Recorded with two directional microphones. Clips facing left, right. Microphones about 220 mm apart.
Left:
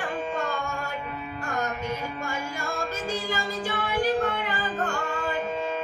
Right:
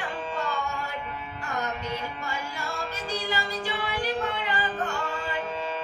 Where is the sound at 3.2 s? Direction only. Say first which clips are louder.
Left 1 dB; 45° left (ahead or behind).